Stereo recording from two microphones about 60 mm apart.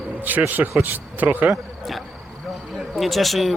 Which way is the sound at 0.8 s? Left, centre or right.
Right.